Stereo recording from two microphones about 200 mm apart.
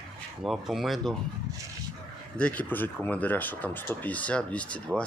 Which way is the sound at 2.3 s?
5° left (ahead or behind).